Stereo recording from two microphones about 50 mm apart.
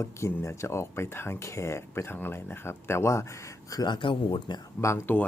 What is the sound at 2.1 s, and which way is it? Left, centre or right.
Speech, left.